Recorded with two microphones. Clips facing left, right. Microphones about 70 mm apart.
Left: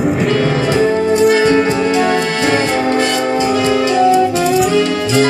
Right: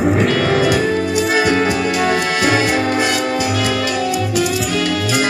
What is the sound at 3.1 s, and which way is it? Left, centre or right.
Music, left.